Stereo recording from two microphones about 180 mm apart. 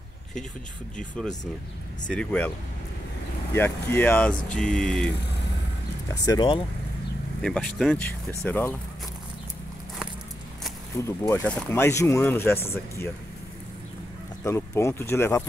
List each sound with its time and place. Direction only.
0.9 s a sound: 5° left (ahead or behind)
2.0 s speech: 5° left (ahead or behind)
3.5 s speech: 10° left (ahead or behind)
4.6 s a sound: 5° left (ahead or behind)
6.0 s speech: 20° left (ahead or behind)
7.4 s a sound: 5° left (ahead or behind)
8.4 s speech: 10° left (ahead or behind)
11.1 s speech: 15° left (ahead or behind)
14.4 s speech: 15° left (ahead or behind)